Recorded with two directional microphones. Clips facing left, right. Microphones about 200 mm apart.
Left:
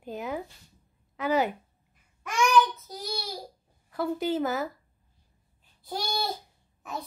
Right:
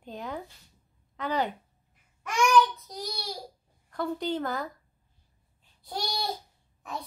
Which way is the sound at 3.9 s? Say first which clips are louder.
Left 2 dB; 5° left (ahead or behind).